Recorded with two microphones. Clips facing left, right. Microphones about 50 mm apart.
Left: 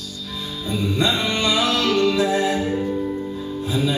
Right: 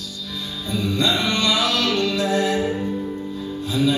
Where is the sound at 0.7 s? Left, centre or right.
Left.